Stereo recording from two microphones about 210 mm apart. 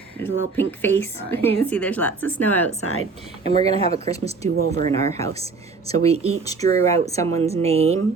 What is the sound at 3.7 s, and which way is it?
Speech, 30° right (ahead or behind).